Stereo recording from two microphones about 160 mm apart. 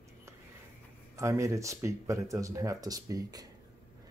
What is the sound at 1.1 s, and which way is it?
Speech, 20° right (ahead or behind).